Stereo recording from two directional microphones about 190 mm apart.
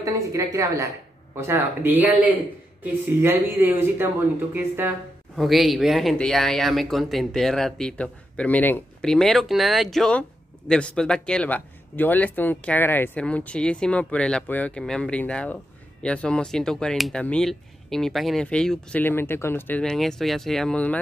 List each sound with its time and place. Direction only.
0.0 s speech: 15° right (ahead or behind); by 21.0 s 5° left (ahead or behind)